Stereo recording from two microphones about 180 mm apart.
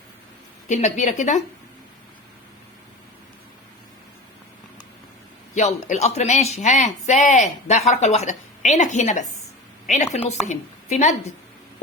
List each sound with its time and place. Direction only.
0.7 s speech: 40° left (ahead or behind)
5.5 s a woman's voice: 40° left (ahead or behind)